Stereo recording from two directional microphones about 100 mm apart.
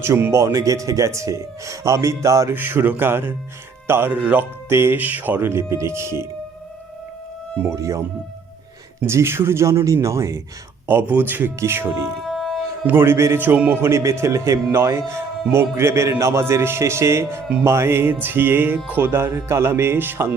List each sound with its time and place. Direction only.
0.0 s speech: 25° right (ahead or behind)
2.6 s speech: 20° right (ahead or behind)
7.6 s speech: 30° right (ahead or behind)
9.0 s speech: 25° right (ahead or behind)
10.8 s speech: 20° right (ahead or behind)
12.3 s a sound: 5° left (ahead or behind)
12.8 s speech: 20° right (ahead or behind)